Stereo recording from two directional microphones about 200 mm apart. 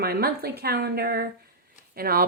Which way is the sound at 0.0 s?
50° right (ahead or behind).